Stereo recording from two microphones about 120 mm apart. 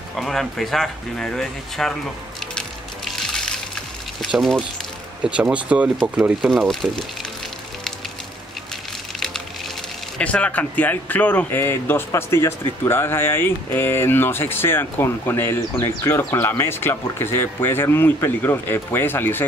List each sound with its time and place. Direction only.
0.1 s speech: centre (ahead or behind)
3.2 s water: 5° left (ahead or behind)
4.3 s speech: 5° right (ahead or behind)
10.1 s speech: 10° left (ahead or behind)